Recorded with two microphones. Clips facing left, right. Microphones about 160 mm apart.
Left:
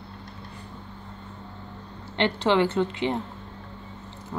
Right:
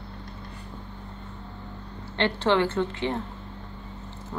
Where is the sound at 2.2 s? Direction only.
15° left (ahead or behind).